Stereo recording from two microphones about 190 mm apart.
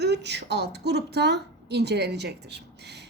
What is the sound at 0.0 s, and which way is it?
A woman's voice, 60° right (ahead or behind).